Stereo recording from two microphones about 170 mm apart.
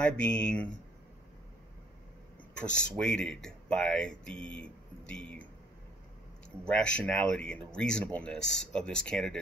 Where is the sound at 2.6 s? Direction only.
5° left (ahead or behind).